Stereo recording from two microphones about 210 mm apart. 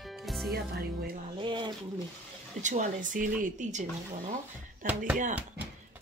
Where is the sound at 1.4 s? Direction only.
20° right (ahead or behind).